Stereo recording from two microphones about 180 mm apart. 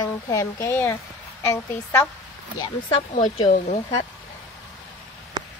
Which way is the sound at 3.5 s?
45° left (ahead or behind).